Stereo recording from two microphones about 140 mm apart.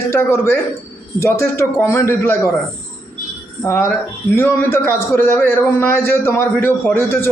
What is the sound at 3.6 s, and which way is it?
A man's voice, 15° left (ahead or behind).